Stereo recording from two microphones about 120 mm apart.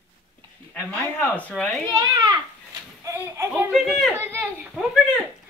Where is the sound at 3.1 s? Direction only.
25° right (ahead or behind).